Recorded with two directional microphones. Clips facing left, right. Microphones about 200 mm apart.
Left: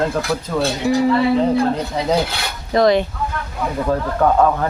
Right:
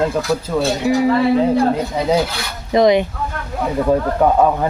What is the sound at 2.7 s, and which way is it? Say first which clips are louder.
Speech: right 2 dB; 15° right (ahead or behind).